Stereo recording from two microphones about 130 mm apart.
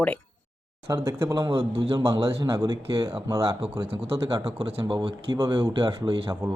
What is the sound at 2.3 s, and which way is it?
Speech, 25° right (ahead or behind).